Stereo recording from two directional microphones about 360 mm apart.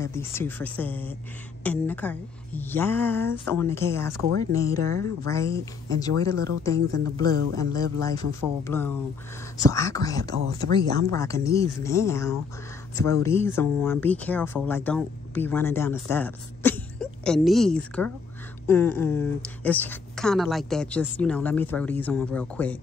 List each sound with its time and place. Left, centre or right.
0.0 s speech: centre
7.2 s a man's voice: right
8.6 s speech: centre